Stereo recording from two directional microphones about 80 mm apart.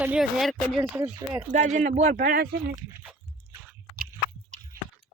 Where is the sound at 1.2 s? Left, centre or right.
Right.